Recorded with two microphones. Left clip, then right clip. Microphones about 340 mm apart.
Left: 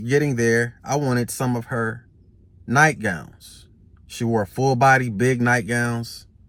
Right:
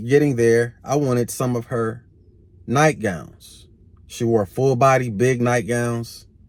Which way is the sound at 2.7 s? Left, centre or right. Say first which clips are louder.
Left 1 dB; centre.